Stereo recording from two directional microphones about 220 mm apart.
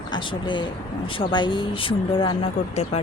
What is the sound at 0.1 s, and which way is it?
Speech, 20° left (ahead or behind).